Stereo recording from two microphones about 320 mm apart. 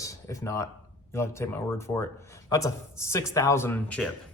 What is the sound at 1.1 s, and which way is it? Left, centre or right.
A man's voice, centre.